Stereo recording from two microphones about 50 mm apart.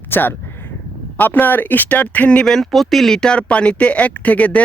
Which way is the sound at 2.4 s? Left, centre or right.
Centre.